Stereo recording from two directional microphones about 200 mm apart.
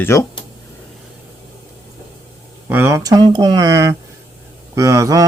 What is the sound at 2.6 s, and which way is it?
Speech, 10° right (ahead or behind).